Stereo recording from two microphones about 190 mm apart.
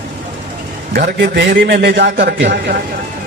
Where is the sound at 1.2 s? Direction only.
65° right (ahead or behind).